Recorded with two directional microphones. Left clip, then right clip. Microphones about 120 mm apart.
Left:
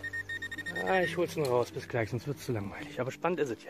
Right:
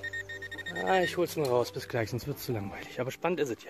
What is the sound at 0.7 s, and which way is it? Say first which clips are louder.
Speech: right 2 dB; 25° right (ahead or behind).